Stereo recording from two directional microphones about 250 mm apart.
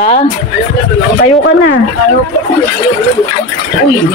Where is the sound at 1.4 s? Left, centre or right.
Left.